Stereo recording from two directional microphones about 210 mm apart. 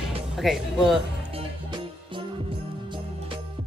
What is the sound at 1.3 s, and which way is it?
Music, 25° right (ahead or behind).